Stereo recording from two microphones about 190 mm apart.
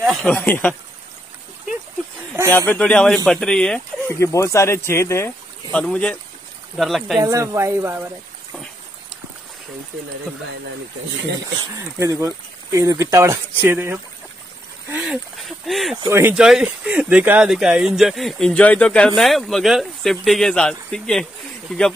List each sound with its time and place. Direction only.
0.1 s speech: 5° left (ahead or behind)
2.5 s speech: 10° left (ahead or behind)
4.2 s speech: 15° left (ahead or behind); by 7.2 s centre (ahead or behind)
7.2 s speech: 15° right (ahead or behind)
11.5 s speech: 15° right (ahead or behind); by 16.0 s centre (ahead or behind)
16.1 s speech: 10° right (ahead or behind)